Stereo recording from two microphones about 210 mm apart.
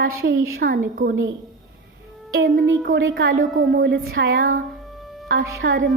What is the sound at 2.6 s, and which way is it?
Speech, 60° right (ahead or behind).